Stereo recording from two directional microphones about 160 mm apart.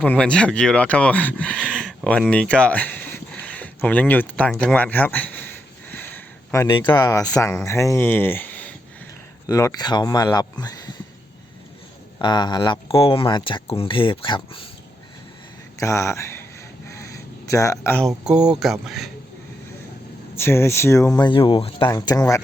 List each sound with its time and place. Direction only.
0.0 s speech: 5° left (ahead or behind)
9.5 s speech: 20° left (ahead or behind)
12.2 s speech: 30° left (ahead or behind)
15.8 s speech: 20° left (ahead or behind)
16.9 s a sound: 20° left (ahead or behind)
18.0 s speech: 5° right (ahead or behind)
20.3 s speech: 15° left (ahead or behind)
21.2 s speech: 30° left (ahead or behind)